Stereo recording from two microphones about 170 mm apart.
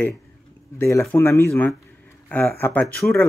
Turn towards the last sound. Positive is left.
turn(degrees=10)  # may be behind; listen again after turning